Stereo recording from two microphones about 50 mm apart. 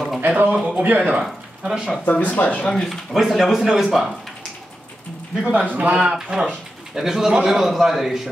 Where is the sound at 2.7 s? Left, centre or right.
Centre.